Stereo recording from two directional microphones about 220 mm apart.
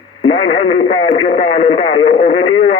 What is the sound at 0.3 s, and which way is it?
A man's voice, 25° left (ahead or behind).